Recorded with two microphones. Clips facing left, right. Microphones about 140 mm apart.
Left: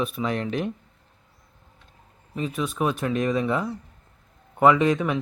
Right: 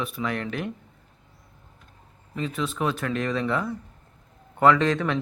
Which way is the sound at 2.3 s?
15° left (ahead or behind).